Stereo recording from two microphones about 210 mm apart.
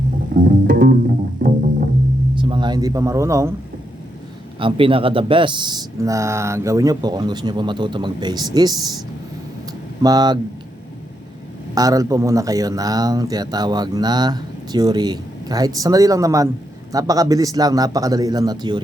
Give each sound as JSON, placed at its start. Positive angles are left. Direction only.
{"t": 0.3, "sound": "music", "side_deg": -40}
{"t": 2.4, "sound": "a man's voice", "side_deg": -20}
{"t": 4.6, "sound": "speech", "side_deg": -25}
{"t": 10.0, "sound": "speech", "side_deg": -20}
{"t": 11.7, "sound": "a man's voice", "side_deg": -15}